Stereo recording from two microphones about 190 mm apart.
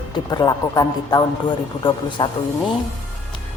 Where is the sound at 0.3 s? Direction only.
20° left (ahead or behind).